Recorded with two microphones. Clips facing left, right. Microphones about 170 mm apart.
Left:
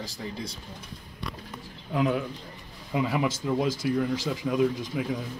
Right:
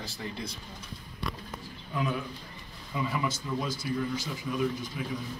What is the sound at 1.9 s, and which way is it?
A man's voice, 85° left.